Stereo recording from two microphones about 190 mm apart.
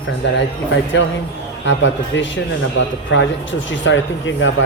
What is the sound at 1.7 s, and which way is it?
Speech, 70° left (ahead or behind).